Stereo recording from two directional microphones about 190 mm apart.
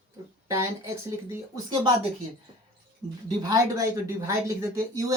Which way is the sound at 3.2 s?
20° right (ahead or behind).